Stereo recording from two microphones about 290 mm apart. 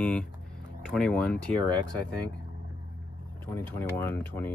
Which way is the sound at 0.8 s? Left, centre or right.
Centre.